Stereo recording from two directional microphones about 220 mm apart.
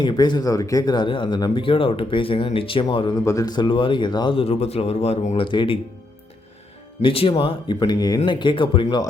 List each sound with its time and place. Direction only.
0.0 s speech: 20° left (ahead or behind)
7.0 s speech: 25° left (ahead or behind)